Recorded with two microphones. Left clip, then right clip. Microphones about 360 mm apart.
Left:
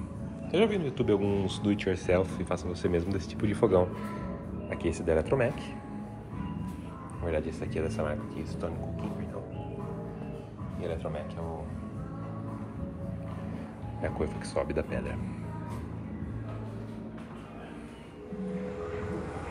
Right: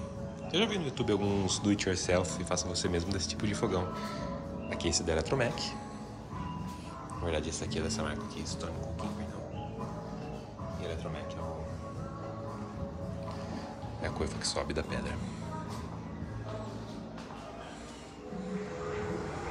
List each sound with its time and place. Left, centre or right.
0.5 s speech: centre
7.2 s speech: centre
10.8 s speech: centre
14.0 s speech: centre